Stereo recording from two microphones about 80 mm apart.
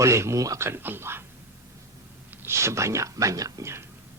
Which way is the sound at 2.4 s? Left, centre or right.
Right.